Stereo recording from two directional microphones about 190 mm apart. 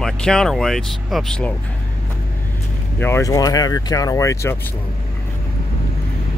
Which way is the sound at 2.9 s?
10° left (ahead or behind).